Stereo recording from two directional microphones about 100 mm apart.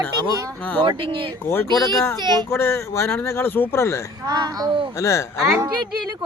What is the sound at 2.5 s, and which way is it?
Speech, 25° left (ahead or behind).